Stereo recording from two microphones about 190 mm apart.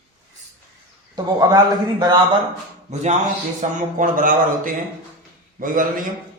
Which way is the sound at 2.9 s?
35° right (ahead or behind).